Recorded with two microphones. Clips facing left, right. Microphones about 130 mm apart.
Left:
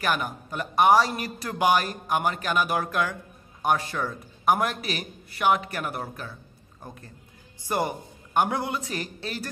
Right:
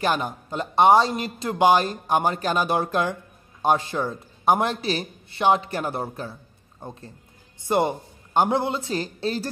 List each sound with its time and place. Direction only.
0.0 s a man's voice: 30° right (ahead or behind)